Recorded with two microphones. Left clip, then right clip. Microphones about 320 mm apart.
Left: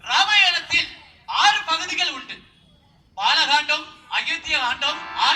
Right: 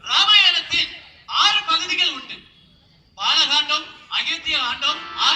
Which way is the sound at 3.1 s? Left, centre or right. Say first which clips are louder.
Even; left.